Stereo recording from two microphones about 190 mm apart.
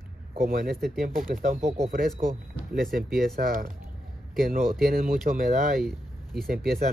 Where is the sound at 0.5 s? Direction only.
50° right (ahead or behind).